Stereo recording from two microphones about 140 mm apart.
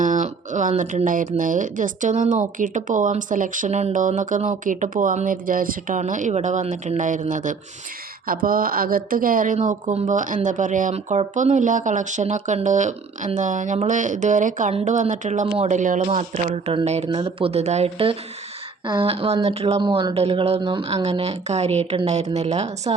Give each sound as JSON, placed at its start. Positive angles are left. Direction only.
{"t": 0.0, "sound": "a sound", "side_deg": -65}
{"t": 0.8, "sound": "speech", "side_deg": -70}
{"t": 8.3, "sound": "a woman's voice", "side_deg": -90}
{"t": 16.0, "sound": "speech", "side_deg": -50}
{"t": 16.5, "sound": "speech", "side_deg": -35}
{"t": 16.8, "sound": "speech", "side_deg": -50}
{"t": 20.6, "sound": "speech", "side_deg": -35}
{"t": 20.9, "sound": "speech", "side_deg": -50}